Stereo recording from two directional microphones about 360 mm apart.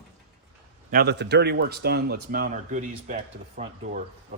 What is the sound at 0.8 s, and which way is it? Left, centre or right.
Speech, right.